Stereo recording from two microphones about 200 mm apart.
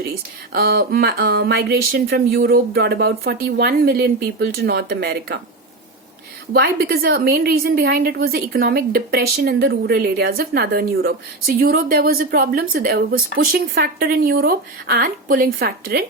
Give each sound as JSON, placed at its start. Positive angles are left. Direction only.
{"t": 0.5, "sound": "speech", "side_deg": -50}
{"t": 6.5, "sound": "speech", "side_deg": -50}